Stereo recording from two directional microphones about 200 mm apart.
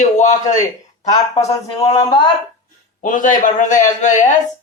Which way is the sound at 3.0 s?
40° left (ahead or behind).